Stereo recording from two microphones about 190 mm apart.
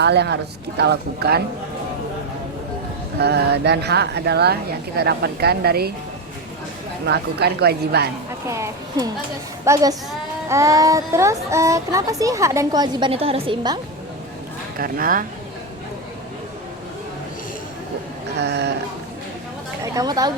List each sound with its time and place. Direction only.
0.0 s speech: 60° right (ahead or behind)
3.2 s speech: 60° right (ahead or behind)
7.0 s speech: 60° right (ahead or behind)
8.4 s speech: 15° right (ahead or behind)
14.8 s speech: 50° right (ahead or behind)
18.3 s speech: 60° right (ahead or behind)
19.8 s a woman's voice: 20° right (ahead or behind)